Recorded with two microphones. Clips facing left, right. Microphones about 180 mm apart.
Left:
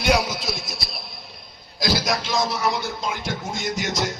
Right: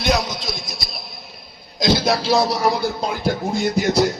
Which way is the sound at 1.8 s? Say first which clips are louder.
Right 5 dB; 25° right (ahead or behind).